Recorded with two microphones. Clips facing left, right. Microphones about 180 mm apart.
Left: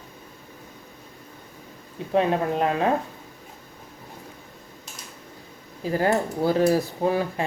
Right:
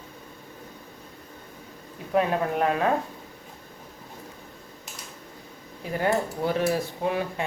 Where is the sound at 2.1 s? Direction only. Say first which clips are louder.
Left 2 dB; 25° left (ahead or behind).